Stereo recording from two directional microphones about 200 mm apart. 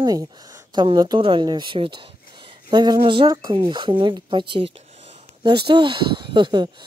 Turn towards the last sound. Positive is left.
turn(degrees=-20)  # may be behind; listen again after turning